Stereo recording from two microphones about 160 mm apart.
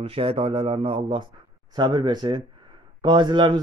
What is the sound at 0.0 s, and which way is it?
Speech, 35° right (ahead or behind).